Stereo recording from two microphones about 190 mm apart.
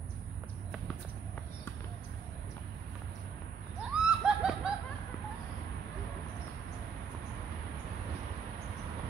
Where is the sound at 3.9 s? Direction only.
5° right (ahead or behind).